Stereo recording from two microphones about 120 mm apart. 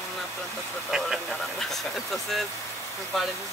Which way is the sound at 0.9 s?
5° right (ahead or behind).